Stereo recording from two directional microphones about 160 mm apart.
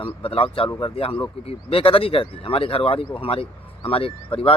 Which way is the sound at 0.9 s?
35° left (ahead or behind).